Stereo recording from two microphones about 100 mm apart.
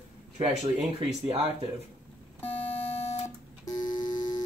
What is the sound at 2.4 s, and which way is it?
Beep, 15° left (ahead or behind).